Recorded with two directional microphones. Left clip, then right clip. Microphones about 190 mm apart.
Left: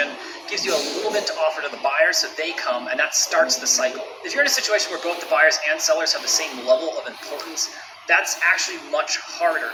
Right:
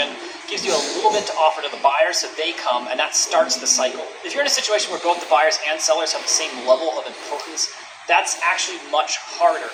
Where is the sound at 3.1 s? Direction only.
25° left (ahead or behind).